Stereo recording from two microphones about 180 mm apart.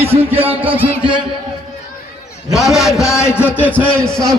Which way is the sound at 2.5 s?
Centre (ahead or behind).